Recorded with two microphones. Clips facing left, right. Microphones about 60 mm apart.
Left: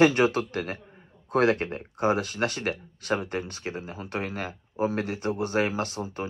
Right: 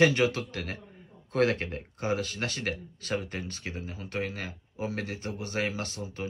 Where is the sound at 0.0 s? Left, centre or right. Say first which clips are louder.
Left 3 dB; left.